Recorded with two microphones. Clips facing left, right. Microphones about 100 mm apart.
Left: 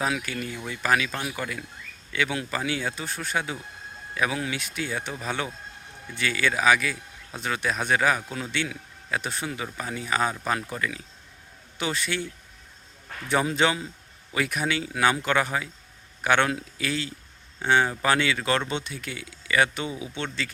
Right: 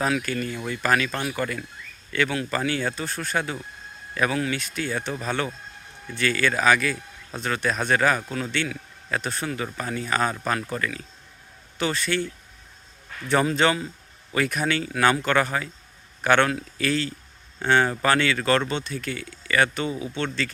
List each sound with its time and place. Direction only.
0.0 s a man's voice: 10° left (ahead or behind)